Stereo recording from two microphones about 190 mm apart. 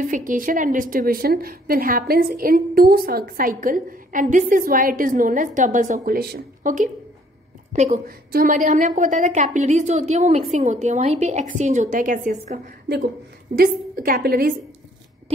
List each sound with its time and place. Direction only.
0.1 s a woman's voice: 45° right (ahead or behind)
7.7 s a woman's voice: 40° right (ahead or behind)